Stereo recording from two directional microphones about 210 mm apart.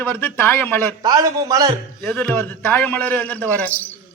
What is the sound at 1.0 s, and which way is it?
Speech, 20° right (ahead or behind).